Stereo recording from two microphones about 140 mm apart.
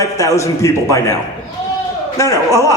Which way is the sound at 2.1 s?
20° left (ahead or behind).